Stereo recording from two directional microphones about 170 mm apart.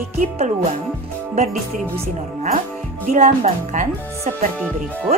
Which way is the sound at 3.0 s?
40° right (ahead or behind).